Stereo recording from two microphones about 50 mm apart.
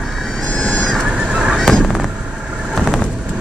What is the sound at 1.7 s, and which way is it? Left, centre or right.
Honk, centre.